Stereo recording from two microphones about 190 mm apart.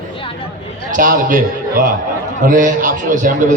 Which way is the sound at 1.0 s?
45° right (ahead or behind).